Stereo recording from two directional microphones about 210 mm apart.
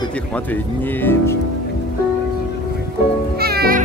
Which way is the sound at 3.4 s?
45° right (ahead or behind).